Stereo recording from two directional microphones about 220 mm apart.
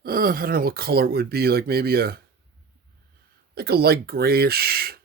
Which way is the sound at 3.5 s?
45° right (ahead or behind).